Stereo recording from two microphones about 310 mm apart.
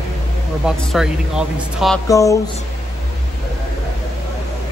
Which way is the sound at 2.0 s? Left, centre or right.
Centre.